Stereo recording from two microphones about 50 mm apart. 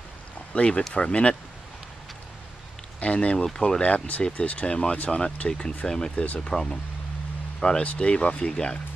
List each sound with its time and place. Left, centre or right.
0.6 s speech: left
3.0 s speech: left
6.2 s speech: left
6.5 s speech: centre